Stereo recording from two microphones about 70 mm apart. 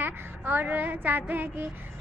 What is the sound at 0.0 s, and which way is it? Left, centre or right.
A woman's voice, right.